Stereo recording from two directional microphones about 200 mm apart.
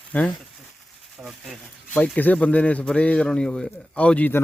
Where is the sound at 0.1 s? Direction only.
5° left (ahead or behind).